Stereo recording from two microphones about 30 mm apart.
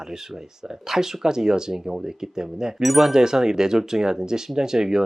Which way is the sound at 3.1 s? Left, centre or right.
Centre.